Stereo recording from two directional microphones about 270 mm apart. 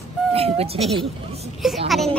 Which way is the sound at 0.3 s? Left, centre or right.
Right.